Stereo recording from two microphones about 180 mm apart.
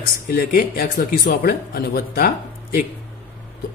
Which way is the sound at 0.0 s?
60° left (ahead or behind).